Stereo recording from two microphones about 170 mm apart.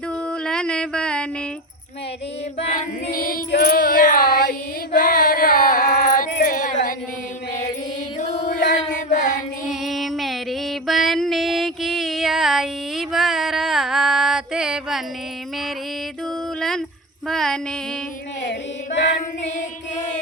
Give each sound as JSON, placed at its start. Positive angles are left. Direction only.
{"t": 0.3, "sound": "a sound", "side_deg": 5}
{"t": 3.1, "sound": "child singing", "side_deg": 60}
{"t": 8.2, "sound": "music", "side_deg": 45}
{"t": 9.0, "sound": "child singing", "side_deg": 45}
{"t": 9.6, "sound": "music", "side_deg": 0}
{"t": 16.6, "sound": "a sound", "side_deg": 0}
{"t": 17.2, "sound": "female singing", "side_deg": 5}